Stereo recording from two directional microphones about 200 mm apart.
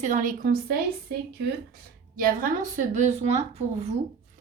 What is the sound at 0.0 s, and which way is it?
Speech, 40° right (ahead or behind).